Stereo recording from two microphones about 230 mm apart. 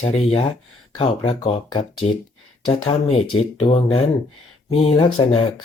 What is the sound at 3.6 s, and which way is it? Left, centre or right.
Speech, left.